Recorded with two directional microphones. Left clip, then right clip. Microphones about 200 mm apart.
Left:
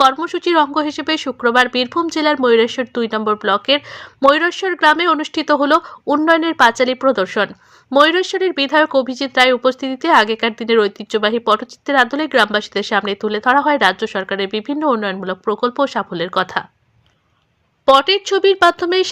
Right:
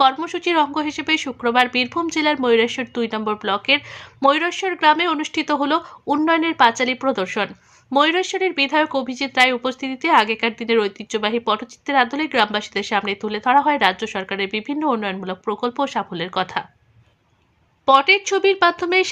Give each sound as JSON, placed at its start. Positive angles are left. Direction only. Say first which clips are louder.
{"t": 0.0, "sound": "speech", "louder": "left 3 dB", "side_deg": 20}
{"t": 17.8, "sound": "speech", "louder": "left 2 dB", "side_deg": 20}